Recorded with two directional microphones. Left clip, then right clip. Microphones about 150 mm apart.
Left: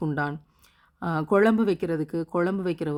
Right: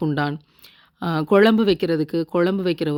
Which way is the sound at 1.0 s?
20° right (ahead or behind).